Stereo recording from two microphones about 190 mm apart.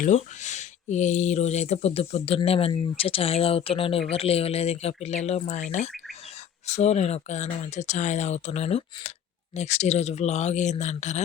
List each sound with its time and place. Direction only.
0.0 s speech: 40° left (ahead or behind)